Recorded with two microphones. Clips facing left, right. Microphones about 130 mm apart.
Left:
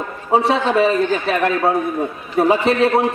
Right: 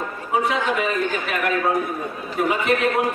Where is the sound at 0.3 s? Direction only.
30° left (ahead or behind).